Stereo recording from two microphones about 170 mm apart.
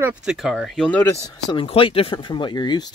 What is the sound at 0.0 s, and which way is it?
Speech, 5° right (ahead or behind).